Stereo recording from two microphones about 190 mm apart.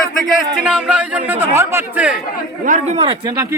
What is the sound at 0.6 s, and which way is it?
Speech, 5° right (ahead or behind).